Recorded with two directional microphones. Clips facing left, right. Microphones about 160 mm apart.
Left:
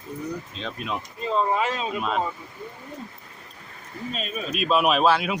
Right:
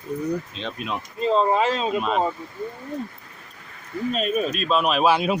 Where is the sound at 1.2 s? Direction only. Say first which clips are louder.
Right 5 dB; 25° right (ahead or behind).